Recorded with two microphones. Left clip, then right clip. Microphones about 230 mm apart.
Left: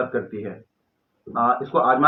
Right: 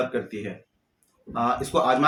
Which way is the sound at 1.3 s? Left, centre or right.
Right.